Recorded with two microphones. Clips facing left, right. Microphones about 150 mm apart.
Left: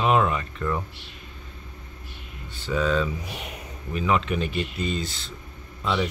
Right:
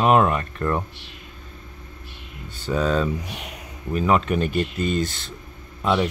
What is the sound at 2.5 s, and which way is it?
Speech, 40° right (ahead or behind).